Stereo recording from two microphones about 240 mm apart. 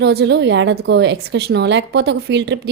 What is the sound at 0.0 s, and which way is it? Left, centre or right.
A woman's voice, right.